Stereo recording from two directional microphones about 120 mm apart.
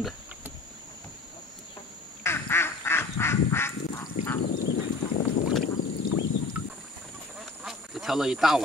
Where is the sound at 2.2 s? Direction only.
20° left (ahead or behind).